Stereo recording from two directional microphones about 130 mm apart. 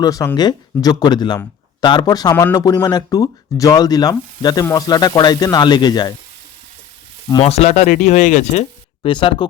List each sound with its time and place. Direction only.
0.0 s speech: 25° left (ahead or behind)
2.3 s speech: 15° left (ahead or behind)
2.8 s speech: 30° left (ahead or behind)
7.4 s speech: 55° left (ahead or behind)
9.0 s speech: 40° left (ahead or behind)